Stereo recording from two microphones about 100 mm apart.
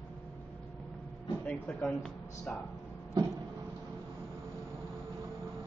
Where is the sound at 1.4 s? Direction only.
10° left (ahead or behind).